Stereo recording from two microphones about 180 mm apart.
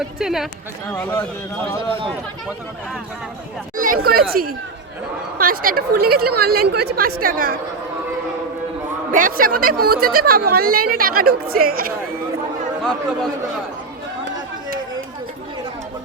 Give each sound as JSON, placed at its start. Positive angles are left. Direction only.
{"t": 0.0, "sound": "speech", "side_deg": 0}
{"t": 3.8, "sound": "speech", "side_deg": -50}
{"t": 9.1, "sound": "speech", "side_deg": -50}